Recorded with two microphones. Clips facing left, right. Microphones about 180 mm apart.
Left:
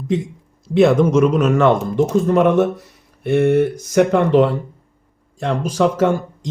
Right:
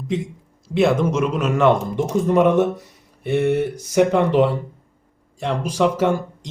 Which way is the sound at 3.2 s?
50° left (ahead or behind).